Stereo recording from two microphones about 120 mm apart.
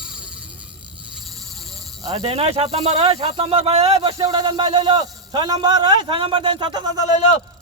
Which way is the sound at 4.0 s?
35° right (ahead or behind).